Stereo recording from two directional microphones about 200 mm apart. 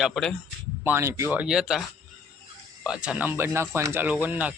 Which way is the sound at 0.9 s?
10° right (ahead or behind).